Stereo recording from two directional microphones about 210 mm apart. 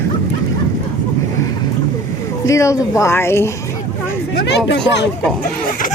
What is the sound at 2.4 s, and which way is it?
Speech, 15° left (ahead or behind).